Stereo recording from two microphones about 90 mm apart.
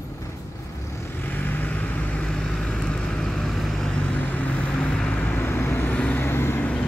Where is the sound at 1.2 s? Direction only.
20° left (ahead or behind).